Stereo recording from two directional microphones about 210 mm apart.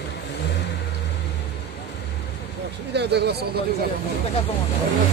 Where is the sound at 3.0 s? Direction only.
50° right (ahead or behind).